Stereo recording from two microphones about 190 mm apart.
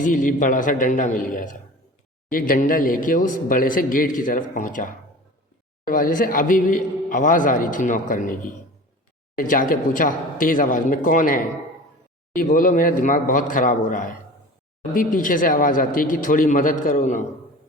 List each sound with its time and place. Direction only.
0.0 s a man's voice: 45° left (ahead or behind)